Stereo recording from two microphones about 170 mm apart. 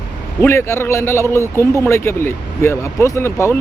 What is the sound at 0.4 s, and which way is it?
Speech, 15° left (ahead or behind).